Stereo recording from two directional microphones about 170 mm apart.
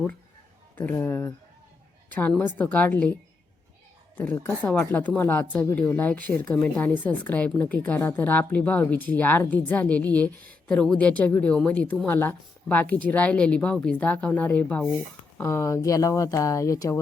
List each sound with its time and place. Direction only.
0.8 s a woman's voice: 10° left (ahead or behind)
4.4 s a woman's voice: 10° left (ahead or behind)